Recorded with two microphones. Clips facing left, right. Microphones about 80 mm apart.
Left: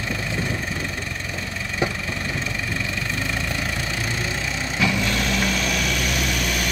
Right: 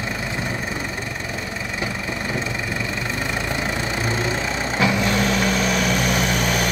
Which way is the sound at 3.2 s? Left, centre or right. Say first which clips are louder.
Right 2 dB; right.